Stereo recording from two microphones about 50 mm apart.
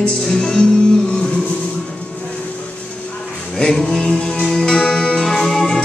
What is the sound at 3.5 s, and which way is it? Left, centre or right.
Music, centre.